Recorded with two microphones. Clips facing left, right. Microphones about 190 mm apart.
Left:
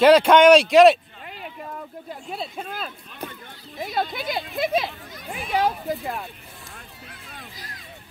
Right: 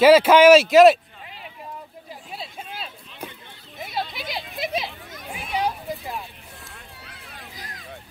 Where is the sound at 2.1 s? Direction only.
Centre (ahead or behind).